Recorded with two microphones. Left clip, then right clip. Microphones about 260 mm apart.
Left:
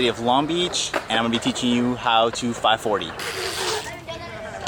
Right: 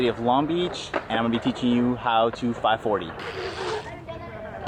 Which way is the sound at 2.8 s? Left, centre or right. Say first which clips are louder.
Left 2 dB; right.